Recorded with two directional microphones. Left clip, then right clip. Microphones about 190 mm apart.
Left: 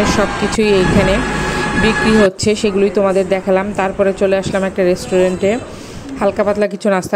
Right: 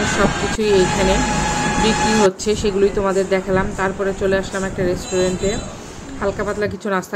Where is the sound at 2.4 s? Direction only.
30° left (ahead or behind).